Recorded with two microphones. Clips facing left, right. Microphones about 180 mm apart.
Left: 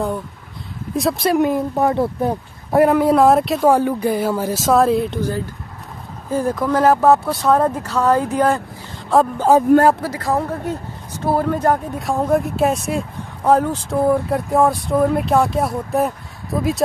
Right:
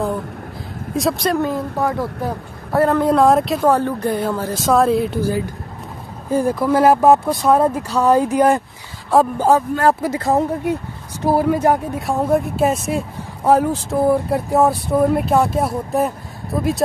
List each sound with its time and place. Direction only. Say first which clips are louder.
0.9 s speech: left 1 dB; centre (ahead or behind)
1.4 s speech: left 3 dB; 20° left (ahead or behind)
2.8 s speech: left 1 dB; 10° left (ahead or behind); by 8.5 s 15° right (ahead or behind)
9.1 s speech: even; 5° right (ahead or behind)
10.0 s speech: right 3 dB; 20° right (ahead or behind); by 16.8 s centre (ahead or behind)